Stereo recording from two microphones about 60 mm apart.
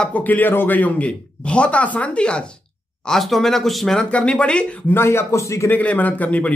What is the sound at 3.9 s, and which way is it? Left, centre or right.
Speech, centre.